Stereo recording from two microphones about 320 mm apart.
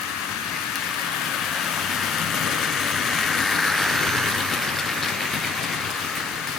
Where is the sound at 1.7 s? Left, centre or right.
Centre.